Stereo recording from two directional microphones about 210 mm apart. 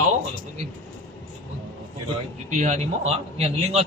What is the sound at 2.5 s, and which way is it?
Speech, 35° right (ahead or behind).